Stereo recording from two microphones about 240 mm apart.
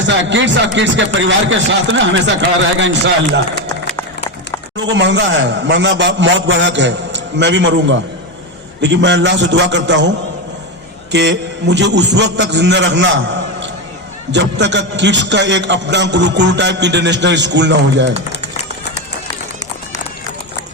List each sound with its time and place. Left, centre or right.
0.0 s a man's voice: right
3.9 s a sound: centre
4.8 s a man's voice: right
11.1 s a man's voice: right
14.3 s a man's voice: right